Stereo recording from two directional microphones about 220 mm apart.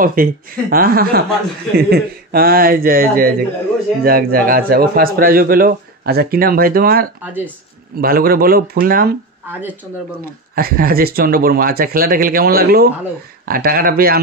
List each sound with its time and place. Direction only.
0.0 s a man's voice: 40° right (ahead or behind)
10.5 s a man's voice: 40° right (ahead or behind)